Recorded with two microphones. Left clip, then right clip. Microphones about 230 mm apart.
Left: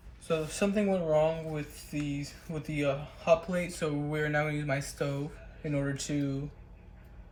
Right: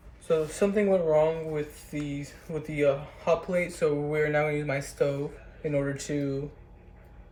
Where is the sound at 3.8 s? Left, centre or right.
Left.